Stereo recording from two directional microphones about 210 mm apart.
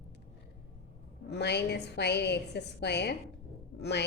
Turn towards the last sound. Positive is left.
turn(degrees=50)  # may be behind; listen again after turning